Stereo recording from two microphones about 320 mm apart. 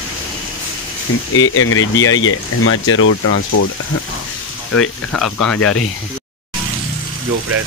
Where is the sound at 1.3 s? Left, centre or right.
Left.